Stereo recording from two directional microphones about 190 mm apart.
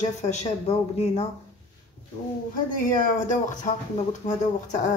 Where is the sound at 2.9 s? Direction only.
45° left (ahead or behind).